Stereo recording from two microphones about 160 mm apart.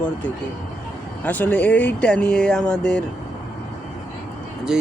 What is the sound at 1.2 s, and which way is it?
Speech, 10° left (ahead or behind).